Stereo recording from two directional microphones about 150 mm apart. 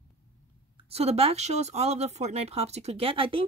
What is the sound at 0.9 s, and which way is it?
Speech, 45° right (ahead or behind).